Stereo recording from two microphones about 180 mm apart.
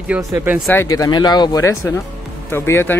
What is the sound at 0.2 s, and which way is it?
Speech, 15° right (ahead or behind).